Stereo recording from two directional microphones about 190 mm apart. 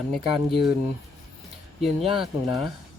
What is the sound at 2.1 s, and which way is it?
Speech, centre (ahead or behind).